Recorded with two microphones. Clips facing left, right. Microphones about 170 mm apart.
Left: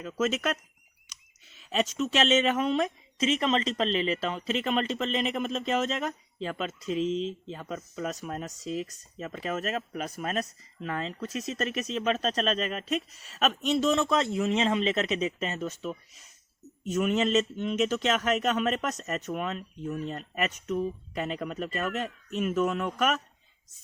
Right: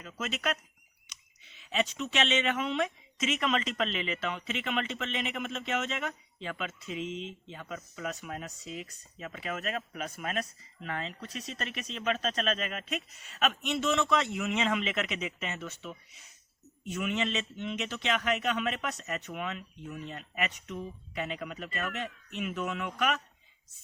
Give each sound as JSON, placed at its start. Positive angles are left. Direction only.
{"t": 0.0, "sound": "speech", "side_deg": 40}
{"t": 1.7, "sound": "speech", "side_deg": 40}